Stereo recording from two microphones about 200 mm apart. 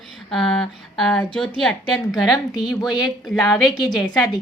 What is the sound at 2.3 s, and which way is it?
Speech, 20° left (ahead or behind).